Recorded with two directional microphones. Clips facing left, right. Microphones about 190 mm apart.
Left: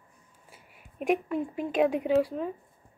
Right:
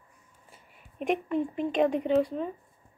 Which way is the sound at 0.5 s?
5° left (ahead or behind).